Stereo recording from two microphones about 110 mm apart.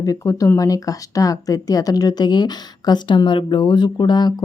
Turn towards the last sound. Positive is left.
turn(degrees=40)  # may be behind; listen again after turning